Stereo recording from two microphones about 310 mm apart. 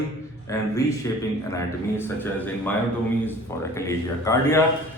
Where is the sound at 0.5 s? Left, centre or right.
Centre.